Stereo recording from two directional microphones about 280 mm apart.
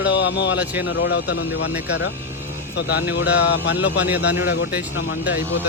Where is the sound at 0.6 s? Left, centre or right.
Centre.